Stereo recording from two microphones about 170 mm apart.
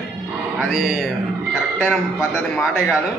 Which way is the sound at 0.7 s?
Centre (ahead or behind).